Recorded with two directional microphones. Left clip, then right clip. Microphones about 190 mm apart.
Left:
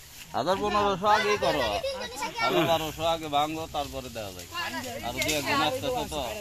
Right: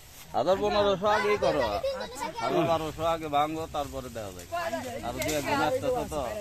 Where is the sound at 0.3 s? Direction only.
50° left (ahead or behind).